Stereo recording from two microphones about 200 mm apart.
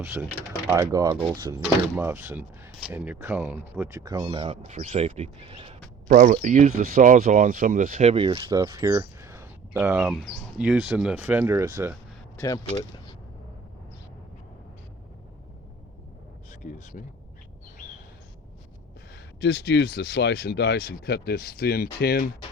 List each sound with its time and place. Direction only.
0.0 s speech: 15° right (ahead or behind)
6.1 s speech: 40° right (ahead or behind)
8.5 s speech: 15° right (ahead or behind)
12.4 s speech: 20° left (ahead or behind)
16.5 s speech: 40° left (ahead or behind)
19.4 s speech: 55° left (ahead or behind)